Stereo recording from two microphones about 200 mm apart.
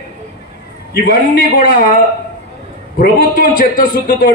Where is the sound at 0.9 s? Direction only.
45° left (ahead or behind).